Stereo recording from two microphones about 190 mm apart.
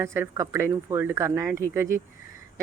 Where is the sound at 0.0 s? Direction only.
15° right (ahead or behind).